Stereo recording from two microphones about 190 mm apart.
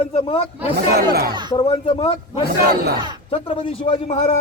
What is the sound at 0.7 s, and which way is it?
Speech, 55° right (ahead or behind).